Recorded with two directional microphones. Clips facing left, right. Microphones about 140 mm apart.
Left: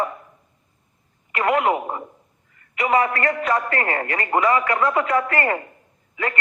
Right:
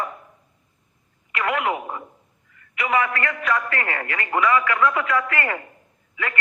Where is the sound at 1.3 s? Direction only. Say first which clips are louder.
Left 4 dB; 35° left (ahead or behind).